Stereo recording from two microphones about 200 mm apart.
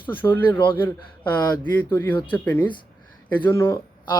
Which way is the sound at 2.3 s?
5° left (ahead or behind).